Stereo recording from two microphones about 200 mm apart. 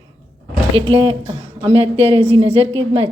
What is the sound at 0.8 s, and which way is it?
A woman's voice, 30° right (ahead or behind).